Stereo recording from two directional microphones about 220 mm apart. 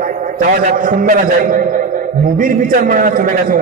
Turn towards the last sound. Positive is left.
turn(degrees=-40)  # may be behind; listen again after turning